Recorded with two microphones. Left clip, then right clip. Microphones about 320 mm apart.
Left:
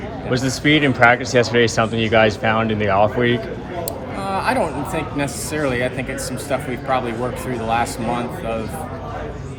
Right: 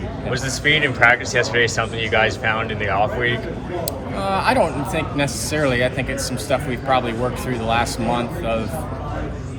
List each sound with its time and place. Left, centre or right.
0.3 s speech: centre
4.2 s speech: centre